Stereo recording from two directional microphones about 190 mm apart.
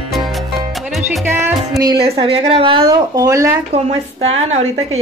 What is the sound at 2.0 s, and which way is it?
A woman's voice, 30° right (ahead or behind).